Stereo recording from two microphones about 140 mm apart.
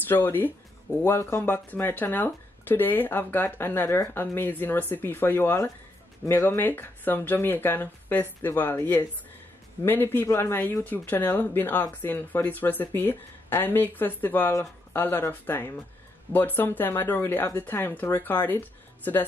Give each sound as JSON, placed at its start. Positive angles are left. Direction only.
{"t": 0.0, "sound": "speech", "side_deg": 15}